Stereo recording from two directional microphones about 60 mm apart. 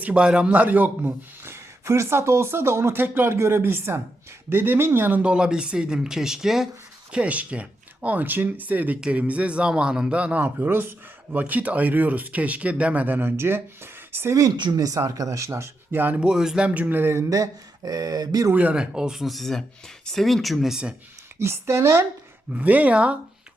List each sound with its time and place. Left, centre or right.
0.1 s a man's voice: centre
1.5 s speech: right
5.2 s speech: centre
7.1 s a man's voice: right
14.3 s speech: right
15.4 s speech: right
15.9 s speech: right
16.2 s a man's voice: centre; by 17.2 s right
17.2 s speech: right
18.5 s a man's voice: right
18.8 s speech: centre
21.3 s speech: right
22.5 s a man's voice: right